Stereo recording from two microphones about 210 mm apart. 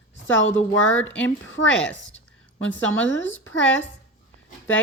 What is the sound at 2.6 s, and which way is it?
A woman's voice, 65° left (ahead or behind).